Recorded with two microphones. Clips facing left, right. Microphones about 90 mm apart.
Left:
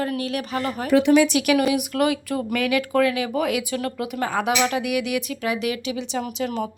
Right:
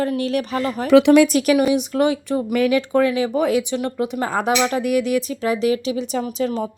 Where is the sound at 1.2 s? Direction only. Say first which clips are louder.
Right 3 dB; 40° right (ahead or behind).